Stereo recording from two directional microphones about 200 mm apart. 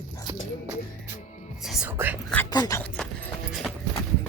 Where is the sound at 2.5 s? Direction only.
15° left (ahead or behind).